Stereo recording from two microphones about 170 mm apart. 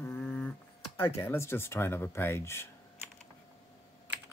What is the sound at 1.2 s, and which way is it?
Speech, 15° left (ahead or behind).